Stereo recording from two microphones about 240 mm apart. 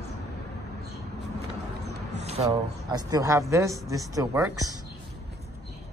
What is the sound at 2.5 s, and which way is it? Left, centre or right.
Speech, centre.